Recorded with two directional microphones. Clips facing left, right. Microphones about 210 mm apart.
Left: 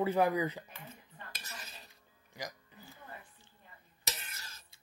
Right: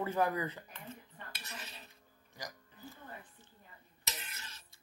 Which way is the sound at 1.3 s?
40° left (ahead or behind).